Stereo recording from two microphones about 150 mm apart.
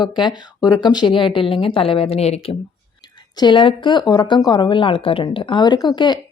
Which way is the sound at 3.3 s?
30° left (ahead or behind).